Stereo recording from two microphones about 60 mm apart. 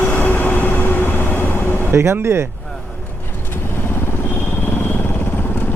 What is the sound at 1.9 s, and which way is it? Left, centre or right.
Speech, right.